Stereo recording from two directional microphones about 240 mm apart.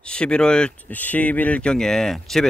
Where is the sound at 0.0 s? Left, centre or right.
Centre.